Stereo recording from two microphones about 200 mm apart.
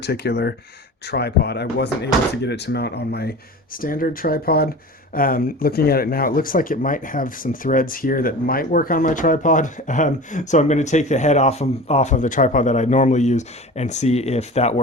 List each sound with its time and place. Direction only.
0.0 s speech: 55° left (ahead or behind); by 14.8 s 30° left (ahead or behind)